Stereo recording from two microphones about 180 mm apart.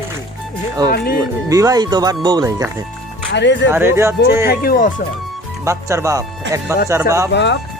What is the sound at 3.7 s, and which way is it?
Speech, 15° right (ahead or behind).